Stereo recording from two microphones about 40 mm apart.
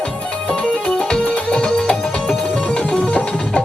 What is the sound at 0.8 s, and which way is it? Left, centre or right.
Music, centre.